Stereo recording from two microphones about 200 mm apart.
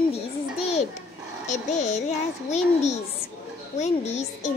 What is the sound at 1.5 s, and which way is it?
Speech, 35° left (ahead or behind).